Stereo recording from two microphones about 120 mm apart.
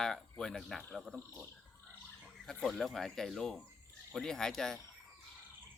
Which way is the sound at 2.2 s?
Centre (ahead or behind).